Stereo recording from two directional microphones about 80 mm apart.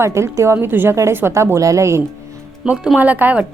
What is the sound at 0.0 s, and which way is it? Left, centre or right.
Speech, right.